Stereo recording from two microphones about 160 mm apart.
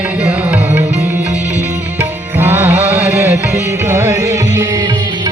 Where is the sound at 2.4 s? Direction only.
15° right (ahead or behind).